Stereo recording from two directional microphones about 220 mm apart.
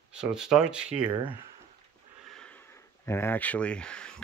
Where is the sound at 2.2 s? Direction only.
5° left (ahead or behind).